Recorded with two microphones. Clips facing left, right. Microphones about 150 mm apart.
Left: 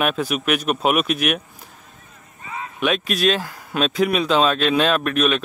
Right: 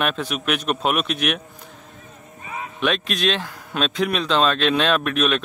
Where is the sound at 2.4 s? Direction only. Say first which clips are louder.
Even; 20° right (ahead or behind).